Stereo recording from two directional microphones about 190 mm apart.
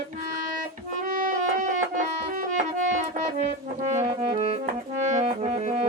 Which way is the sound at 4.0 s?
35° right (ahead or behind).